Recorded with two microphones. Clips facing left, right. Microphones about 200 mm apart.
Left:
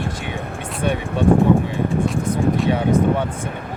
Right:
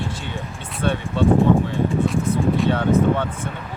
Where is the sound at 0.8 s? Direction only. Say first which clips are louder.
Even; 15° left (ahead or behind).